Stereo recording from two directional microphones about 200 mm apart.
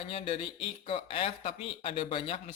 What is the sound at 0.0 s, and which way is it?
Speech, 30° left (ahead or behind).